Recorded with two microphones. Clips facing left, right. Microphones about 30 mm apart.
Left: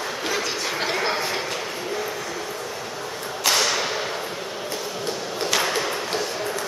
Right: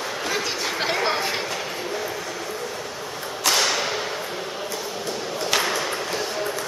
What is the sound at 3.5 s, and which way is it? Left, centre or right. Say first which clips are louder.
Whip: even; centre.